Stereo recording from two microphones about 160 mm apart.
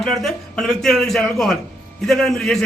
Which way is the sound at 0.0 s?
Centre (ahead or behind).